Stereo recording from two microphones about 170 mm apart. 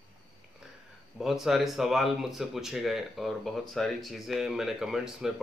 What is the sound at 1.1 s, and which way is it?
Speech, centre (ahead or behind).